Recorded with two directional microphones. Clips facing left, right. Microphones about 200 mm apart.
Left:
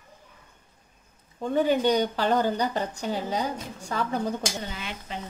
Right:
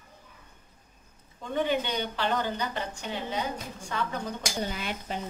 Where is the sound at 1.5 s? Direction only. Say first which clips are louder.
Left 6 dB; 40° left (ahead or behind).